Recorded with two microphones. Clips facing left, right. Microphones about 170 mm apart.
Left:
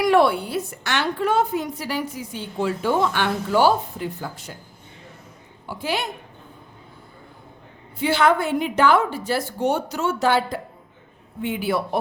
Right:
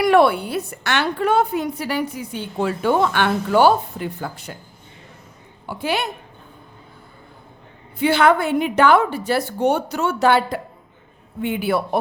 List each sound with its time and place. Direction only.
0.0 s a woman's voice: 60° right (ahead or behind)
5.6 s a woman's voice: 65° right (ahead or behind)
7.9 s a woman's voice: 60° right (ahead or behind)